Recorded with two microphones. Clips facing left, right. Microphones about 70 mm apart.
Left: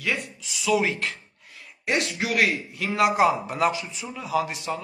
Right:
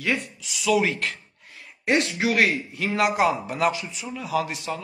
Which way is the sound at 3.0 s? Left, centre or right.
Centre.